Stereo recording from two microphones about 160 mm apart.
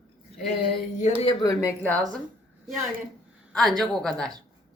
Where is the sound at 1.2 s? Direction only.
25° left (ahead or behind).